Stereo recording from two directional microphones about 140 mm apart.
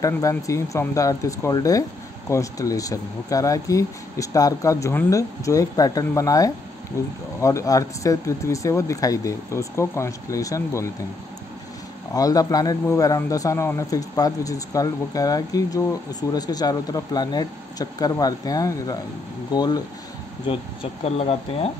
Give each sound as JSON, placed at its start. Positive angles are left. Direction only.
{"t": 0.0, "sound": "a man's voice", "side_deg": 25}
{"t": 12.1, "sound": "a man's voice", "side_deg": 25}
{"t": 20.4, "sound": "speech", "side_deg": 45}